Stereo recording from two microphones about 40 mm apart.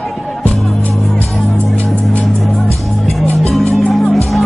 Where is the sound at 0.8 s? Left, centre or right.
Left.